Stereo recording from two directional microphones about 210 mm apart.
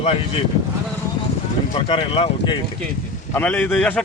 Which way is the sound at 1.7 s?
25° left (ahead or behind).